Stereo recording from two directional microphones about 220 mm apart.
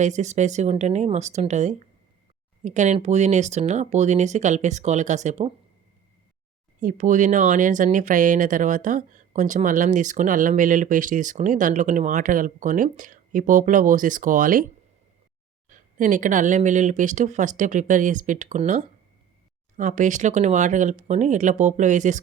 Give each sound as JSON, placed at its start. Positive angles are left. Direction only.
{"t": 0.0, "sound": "speech", "side_deg": -30}
{"t": 6.7, "sound": "speech", "side_deg": -35}
{"t": 15.7, "sound": "speech", "side_deg": -35}